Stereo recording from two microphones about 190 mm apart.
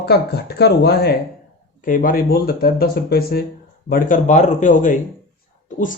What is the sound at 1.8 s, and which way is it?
Speech, 45° left (ahead or behind).